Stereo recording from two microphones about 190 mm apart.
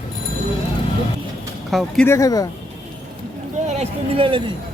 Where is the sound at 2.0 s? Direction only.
15° left (ahead or behind).